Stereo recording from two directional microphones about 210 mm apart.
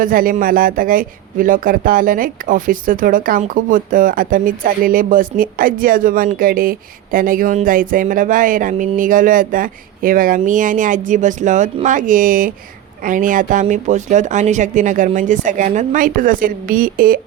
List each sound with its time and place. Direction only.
0.0 s speech: 40° right (ahead or behind)